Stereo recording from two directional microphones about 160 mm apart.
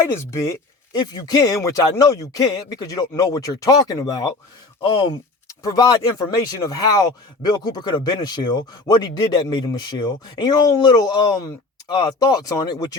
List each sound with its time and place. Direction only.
0.3 s speech: 20° left (ahead or behind)